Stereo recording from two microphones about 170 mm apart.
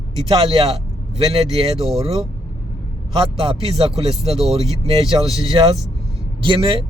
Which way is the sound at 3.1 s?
35° right (ahead or behind).